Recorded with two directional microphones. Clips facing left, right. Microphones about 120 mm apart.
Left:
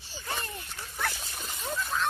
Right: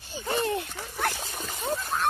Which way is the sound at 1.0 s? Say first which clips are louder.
Right 5 dB; 50° right (ahead or behind).